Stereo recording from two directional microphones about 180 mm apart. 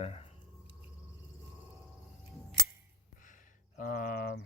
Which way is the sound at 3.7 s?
50° left (ahead or behind).